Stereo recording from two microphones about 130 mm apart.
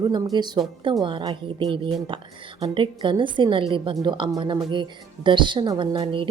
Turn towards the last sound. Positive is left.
turn(degrees=-40)  # may be behind; listen again after turning